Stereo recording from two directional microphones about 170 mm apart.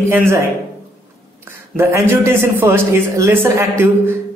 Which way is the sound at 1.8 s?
15° right (ahead or behind).